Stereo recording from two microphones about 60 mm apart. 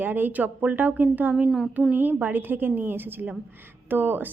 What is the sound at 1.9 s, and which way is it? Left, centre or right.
Speech, right.